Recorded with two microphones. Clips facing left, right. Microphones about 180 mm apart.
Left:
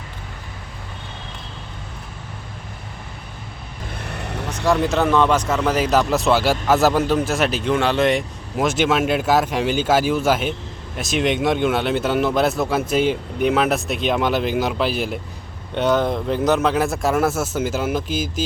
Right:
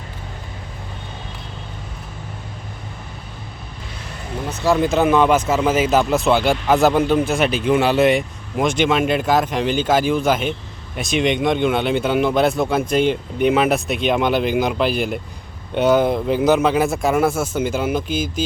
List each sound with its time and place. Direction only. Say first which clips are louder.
4.0 s vehicle: left 2 dB; 65° left (ahead or behind)
4.6 s speech: right 2 dB; centre (ahead or behind)
18.1 s speech: right 2 dB; 55° right (ahead or behind)